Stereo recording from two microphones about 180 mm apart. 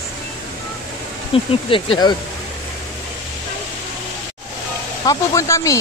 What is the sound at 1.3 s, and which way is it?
Speech, 30° left (ahead or behind).